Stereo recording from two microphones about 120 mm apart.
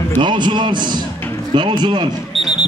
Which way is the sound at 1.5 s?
40° right (ahead or behind).